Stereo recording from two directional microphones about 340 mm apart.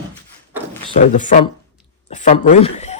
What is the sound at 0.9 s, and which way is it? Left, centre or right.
Speech, left.